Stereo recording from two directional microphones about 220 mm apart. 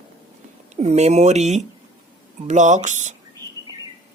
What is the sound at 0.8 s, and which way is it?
Speech, 30° right (ahead or behind).